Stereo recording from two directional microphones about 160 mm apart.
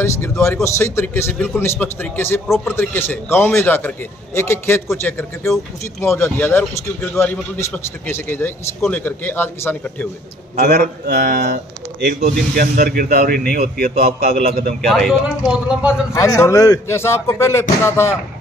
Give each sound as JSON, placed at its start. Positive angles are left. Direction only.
{"t": 0.0, "sound": "a man's voice", "side_deg": 15}
{"t": 2.4, "sound": "speech", "side_deg": 0}
{"t": 2.7, "sound": "a man's voice", "side_deg": 15}
{"t": 10.6, "sound": "speech", "side_deg": -75}
{"t": 12.5, "sound": "speech", "side_deg": -65}
{"t": 14.8, "sound": "speech", "side_deg": 0}
{"t": 16.1, "sound": "a man's voice", "side_deg": 20}